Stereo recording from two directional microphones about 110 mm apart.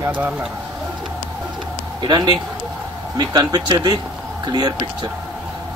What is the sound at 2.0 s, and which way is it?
Speech, 45° right (ahead or behind).